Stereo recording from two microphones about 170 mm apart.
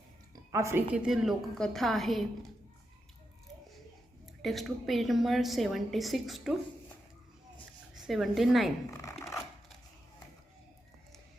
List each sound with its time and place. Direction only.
0.5 s a woman's voice: 15° right (ahead or behind)
0.9 s a woman's voice: 5° right (ahead or behind)
4.4 s a woman's voice: centre (ahead or behind)
7.9 s a woman's voice: centre (ahead or behind)
8.9 s a sound: 15° left (ahead or behind)